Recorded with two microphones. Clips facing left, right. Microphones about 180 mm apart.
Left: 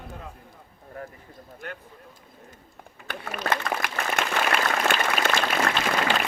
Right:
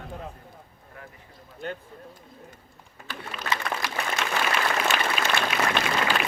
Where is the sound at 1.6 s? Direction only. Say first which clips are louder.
Right 5 dB; 25° right (ahead or behind).